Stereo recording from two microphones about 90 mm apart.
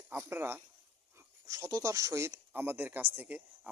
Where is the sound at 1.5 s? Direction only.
35° right (ahead or behind); by 3.4 s 15° right (ahead or behind).